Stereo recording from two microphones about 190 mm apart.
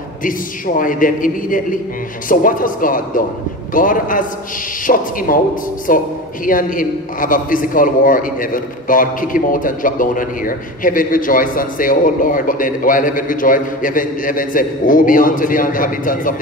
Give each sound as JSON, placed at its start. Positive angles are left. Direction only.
{"t": 0.2, "sound": "a man's voice", "side_deg": 45}